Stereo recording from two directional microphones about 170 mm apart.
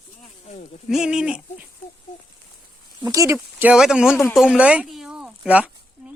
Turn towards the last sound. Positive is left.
turn(degrees=-10)  # may be behind; listen again after turning